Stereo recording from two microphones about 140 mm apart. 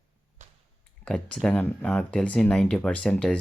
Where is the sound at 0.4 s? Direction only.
60° right (ahead or behind).